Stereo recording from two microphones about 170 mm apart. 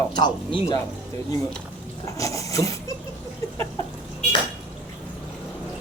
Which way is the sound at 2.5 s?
20° left (ahead or behind).